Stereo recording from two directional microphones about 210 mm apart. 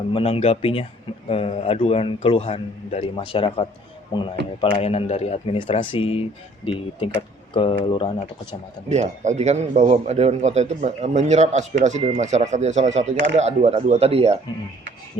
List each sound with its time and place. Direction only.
0.1 s a man's voice: 25° left (ahead or behind)
8.9 s a man's voice: 35° right (ahead or behind)